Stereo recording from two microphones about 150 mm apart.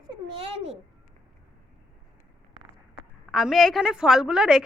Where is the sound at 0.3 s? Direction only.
40° right (ahead or behind).